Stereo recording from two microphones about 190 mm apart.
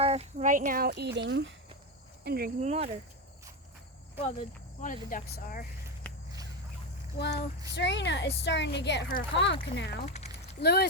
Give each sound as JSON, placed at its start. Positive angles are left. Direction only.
{"t": 0.0, "sound": "speech", "side_deg": -35}
{"t": 2.2, "sound": "speech", "side_deg": -55}
{"t": 2.6, "sound": "speech", "side_deg": -35}
{"t": 4.8, "sound": "speech", "side_deg": 45}
{"t": 7.2, "sound": "a woman's voice", "side_deg": 60}
{"t": 10.2, "sound": "a sound", "side_deg": 35}
{"t": 10.6, "sound": "a woman's voice", "side_deg": 60}